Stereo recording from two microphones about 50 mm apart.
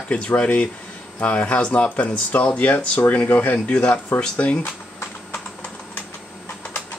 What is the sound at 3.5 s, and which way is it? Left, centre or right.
Speech, left.